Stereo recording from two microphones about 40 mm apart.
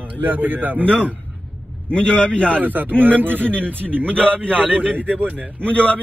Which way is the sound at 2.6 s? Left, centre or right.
Right.